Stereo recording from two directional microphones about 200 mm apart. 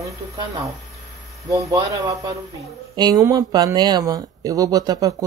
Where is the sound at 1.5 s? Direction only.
15° right (ahead or behind).